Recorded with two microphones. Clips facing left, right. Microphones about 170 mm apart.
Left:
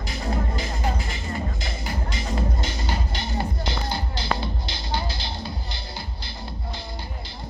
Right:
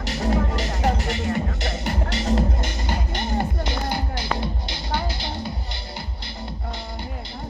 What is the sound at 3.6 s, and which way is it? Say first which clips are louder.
Music: right 3 dB; 15° right (ahead or behind).